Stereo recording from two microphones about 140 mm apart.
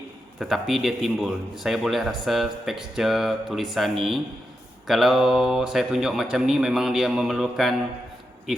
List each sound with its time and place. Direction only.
0.3 s a man's voice: centre (ahead or behind)